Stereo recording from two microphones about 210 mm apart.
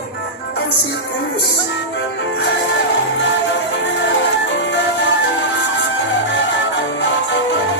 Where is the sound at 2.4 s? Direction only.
60° left (ahead or behind).